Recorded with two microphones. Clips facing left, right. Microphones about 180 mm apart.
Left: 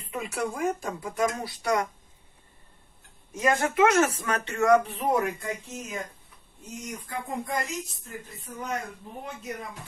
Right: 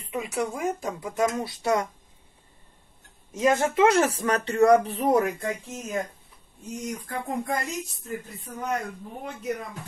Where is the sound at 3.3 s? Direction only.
30° right (ahead or behind).